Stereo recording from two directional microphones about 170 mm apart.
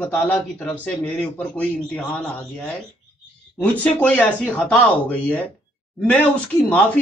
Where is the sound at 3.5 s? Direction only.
10° left (ahead or behind).